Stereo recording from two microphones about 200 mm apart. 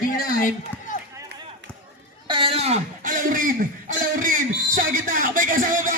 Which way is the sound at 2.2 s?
25° right (ahead or behind).